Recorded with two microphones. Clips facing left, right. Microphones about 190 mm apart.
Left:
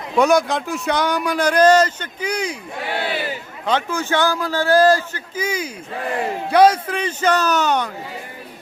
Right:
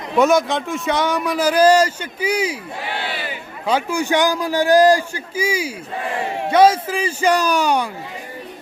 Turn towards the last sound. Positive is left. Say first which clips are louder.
# right 1 dB
turn(degrees=-10)  # may be behind; listen again after turning